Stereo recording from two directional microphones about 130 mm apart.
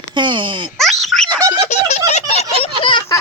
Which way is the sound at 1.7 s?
60° left (ahead or behind).